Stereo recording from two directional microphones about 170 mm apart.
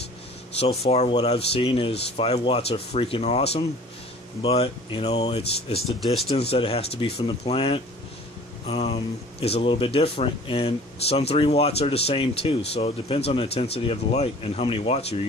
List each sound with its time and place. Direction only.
0.8 s speech: 40° left (ahead or behind)
5.8 s speech: centre (ahead or behind)
6.5 s speech: 35° left (ahead or behind)